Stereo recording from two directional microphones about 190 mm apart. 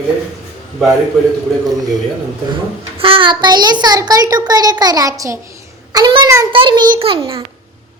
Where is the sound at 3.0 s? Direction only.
30° right (ahead or behind).